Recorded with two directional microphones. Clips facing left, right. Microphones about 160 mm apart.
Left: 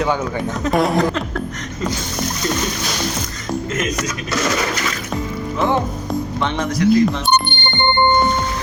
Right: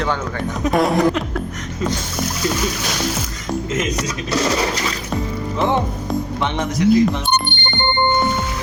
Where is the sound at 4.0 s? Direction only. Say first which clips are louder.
Right 1 dB; 30° right (ahead or behind).